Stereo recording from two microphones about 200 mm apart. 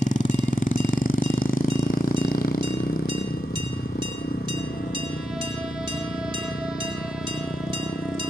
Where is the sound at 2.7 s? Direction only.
45° left (ahead or behind).